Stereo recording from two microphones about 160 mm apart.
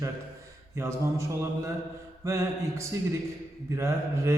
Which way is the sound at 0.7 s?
15° right (ahead or behind).